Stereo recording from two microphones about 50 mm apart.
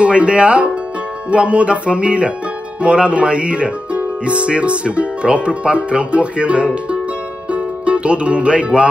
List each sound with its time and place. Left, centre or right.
0.0 s speech: right
7.5 s music: right